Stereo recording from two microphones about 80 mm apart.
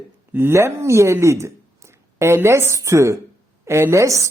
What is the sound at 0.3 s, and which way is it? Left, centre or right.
A woman's voice, right.